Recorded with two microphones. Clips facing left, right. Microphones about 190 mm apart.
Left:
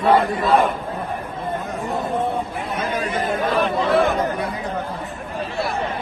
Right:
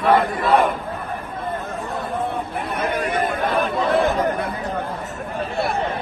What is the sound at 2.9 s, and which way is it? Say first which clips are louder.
Chatter: right 2 dB; 60° right (ahead or behind).